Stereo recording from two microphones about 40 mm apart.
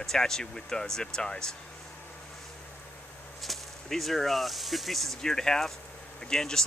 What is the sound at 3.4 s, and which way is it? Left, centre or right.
Speech, centre.